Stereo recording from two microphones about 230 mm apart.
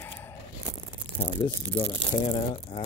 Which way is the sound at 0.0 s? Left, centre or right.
Centre.